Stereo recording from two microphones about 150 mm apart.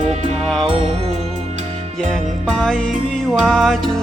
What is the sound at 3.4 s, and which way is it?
Music, centre (ahead or behind).